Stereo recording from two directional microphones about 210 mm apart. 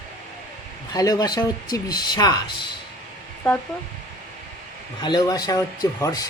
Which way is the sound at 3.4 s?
15° left (ahead or behind).